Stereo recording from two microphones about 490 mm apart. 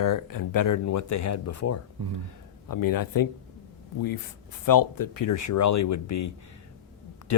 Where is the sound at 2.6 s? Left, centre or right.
Left.